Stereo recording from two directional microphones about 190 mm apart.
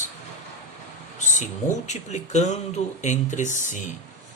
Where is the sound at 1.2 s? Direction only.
40° left (ahead or behind).